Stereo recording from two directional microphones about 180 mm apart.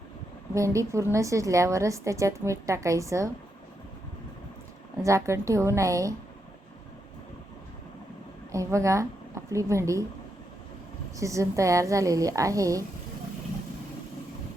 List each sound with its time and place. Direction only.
0.5 s a woman's voice: 15° right (ahead or behind)
5.0 s a woman's voice: 15° right (ahead or behind)
8.5 s a woman's voice: 15° right (ahead or behind)
11.2 s a woman's voice: 15° right (ahead or behind)